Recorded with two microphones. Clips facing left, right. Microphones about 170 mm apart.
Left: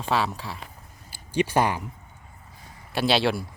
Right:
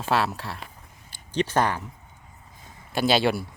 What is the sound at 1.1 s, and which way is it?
Speech, 10° left (ahead or behind).